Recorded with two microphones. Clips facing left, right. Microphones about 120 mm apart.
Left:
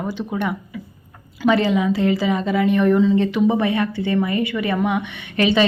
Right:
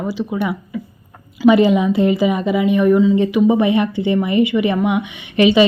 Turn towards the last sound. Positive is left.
turn(degrees=-15)  # may be behind; listen again after turning